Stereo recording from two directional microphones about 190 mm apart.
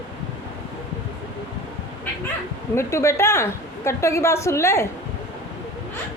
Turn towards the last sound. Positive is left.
turn(degrees=15)  # may be behind; listen again after turning